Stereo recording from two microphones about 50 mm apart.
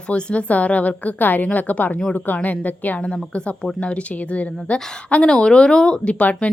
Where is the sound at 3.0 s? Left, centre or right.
Centre.